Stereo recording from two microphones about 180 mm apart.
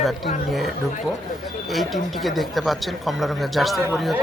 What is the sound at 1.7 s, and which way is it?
Speech, centre (ahead or behind).